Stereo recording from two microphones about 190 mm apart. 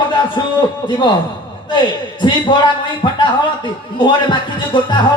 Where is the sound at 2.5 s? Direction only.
25° left (ahead or behind).